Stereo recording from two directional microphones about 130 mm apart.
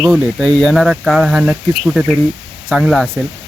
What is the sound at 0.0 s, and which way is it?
Speech, centre (ahead or behind).